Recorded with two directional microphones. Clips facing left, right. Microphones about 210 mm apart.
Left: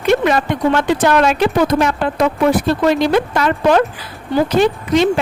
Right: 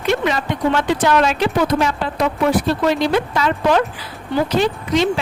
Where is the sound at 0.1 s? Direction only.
55° left (ahead or behind).